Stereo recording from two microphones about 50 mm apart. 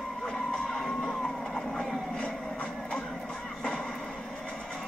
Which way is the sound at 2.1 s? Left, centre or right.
Left.